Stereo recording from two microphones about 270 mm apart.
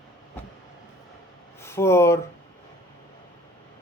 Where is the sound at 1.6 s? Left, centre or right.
Centre.